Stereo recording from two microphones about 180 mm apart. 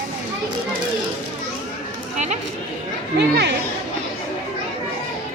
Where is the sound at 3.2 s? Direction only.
70° right (ahead or behind).